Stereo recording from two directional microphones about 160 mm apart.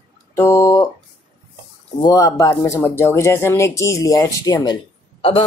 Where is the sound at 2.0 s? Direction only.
20° left (ahead or behind).